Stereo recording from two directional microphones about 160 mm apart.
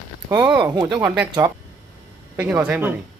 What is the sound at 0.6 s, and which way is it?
Speech, 25° right (ahead or behind).